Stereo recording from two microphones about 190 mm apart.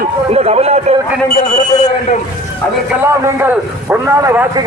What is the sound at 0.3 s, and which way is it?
Speech, 35° right (ahead or behind).